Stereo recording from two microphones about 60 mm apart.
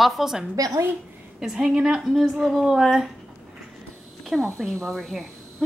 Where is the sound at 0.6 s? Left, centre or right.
Right.